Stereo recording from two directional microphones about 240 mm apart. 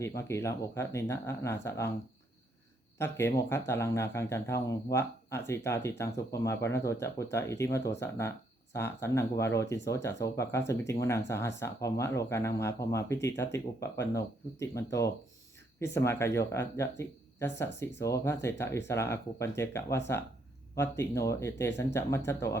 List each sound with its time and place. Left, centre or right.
0.0 s speech: centre
3.0 s speech: centre